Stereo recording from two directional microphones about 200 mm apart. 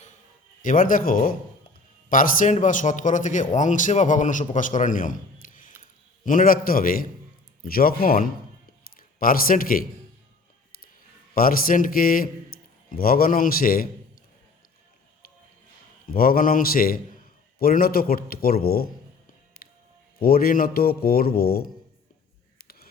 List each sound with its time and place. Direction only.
0.6 s a man's voice: 40° left (ahead or behind)
11.3 s a man's voice: 45° left (ahead or behind)
16.0 s speech: 45° left (ahead or behind)
19.6 s music: 45° left (ahead or behind)
20.1 s speech: 50° left (ahead or behind)